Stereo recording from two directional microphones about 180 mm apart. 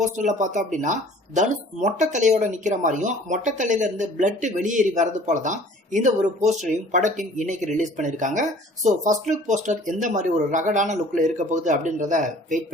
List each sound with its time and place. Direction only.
0.0 s speech: 40° right (ahead or behind)